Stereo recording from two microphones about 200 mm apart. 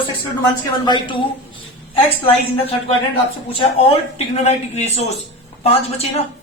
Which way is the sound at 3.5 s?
30° left (ahead or behind).